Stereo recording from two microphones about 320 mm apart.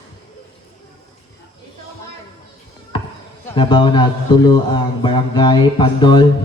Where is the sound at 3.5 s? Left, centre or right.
Centre.